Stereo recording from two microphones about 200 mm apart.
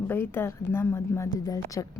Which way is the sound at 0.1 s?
10° left (ahead or behind).